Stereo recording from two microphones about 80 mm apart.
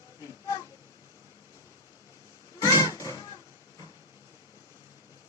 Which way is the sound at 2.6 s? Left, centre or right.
Left.